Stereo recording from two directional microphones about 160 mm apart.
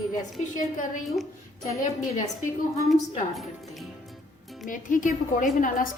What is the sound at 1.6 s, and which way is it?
Speech, 50° left (ahead or behind).